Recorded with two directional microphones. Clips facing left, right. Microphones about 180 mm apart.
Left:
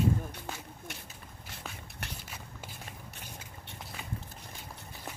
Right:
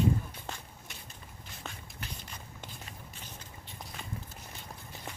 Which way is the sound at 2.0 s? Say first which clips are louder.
Left 1 dB; 75° left (ahead or behind).